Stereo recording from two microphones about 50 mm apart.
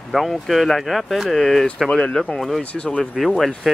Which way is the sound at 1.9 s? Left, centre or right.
Centre.